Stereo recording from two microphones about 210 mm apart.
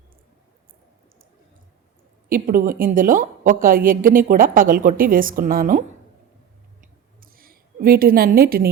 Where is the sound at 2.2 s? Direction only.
40° right (ahead or behind).